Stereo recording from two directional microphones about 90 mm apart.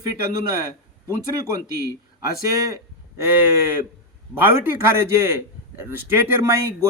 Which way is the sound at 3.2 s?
25° right (ahead or behind).